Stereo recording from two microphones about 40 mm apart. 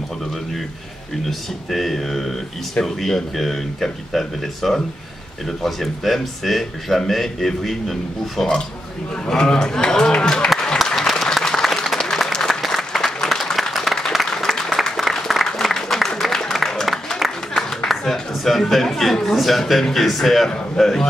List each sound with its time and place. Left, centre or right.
1.7 s speech: centre
9.1 s a man's voice: centre
11.0 s applause: centre
12.4 s applause: centre
16.2 s music: centre
17.8 s a sound: centre
18.6 s speech: centre
20.4 s a man's voice: centre